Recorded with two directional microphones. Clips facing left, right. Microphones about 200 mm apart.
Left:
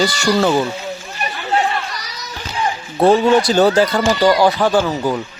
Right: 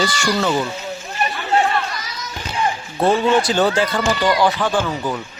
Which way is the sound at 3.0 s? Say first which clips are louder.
Left 4 dB; 40° left (ahead or behind).